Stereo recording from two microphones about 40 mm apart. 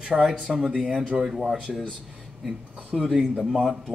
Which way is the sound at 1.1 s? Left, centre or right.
Centre.